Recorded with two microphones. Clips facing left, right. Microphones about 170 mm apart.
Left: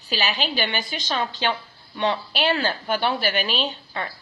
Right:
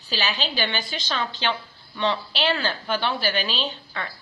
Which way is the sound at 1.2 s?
45° left (ahead or behind).